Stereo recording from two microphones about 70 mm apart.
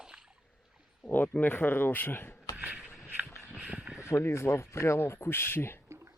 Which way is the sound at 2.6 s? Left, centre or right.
Centre.